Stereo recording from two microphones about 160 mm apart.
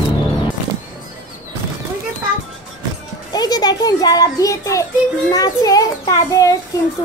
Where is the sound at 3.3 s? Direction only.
25° left (ahead or behind).